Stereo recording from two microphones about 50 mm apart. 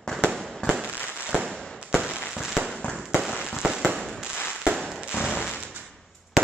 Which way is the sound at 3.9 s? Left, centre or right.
Centre.